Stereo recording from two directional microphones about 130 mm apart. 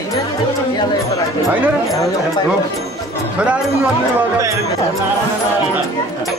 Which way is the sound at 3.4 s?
10° right (ahead or behind).